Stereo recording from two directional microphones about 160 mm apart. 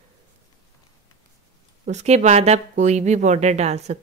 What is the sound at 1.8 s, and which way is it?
Speech, 45° right (ahead or behind).